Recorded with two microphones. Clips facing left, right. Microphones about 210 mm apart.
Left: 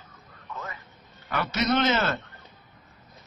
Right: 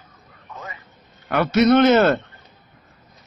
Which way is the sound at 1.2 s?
60° right (ahead or behind).